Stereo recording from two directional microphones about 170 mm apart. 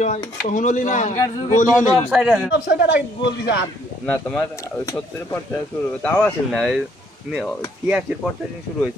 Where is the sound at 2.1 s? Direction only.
5° right (ahead or behind).